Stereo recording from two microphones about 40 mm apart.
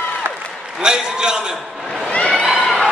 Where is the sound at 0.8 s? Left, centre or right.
Centre.